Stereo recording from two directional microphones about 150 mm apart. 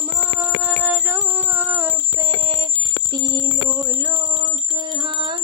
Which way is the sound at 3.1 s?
25° right (ahead or behind).